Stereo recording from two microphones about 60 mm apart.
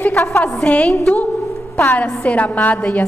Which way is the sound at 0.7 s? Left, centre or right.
Centre.